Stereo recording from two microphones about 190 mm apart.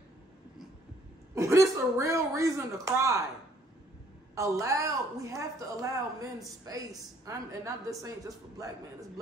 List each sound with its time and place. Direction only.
1.3 s a woman's voice: 15° right (ahead or behind)
4.4 s a woman's voice: 15° right (ahead or behind)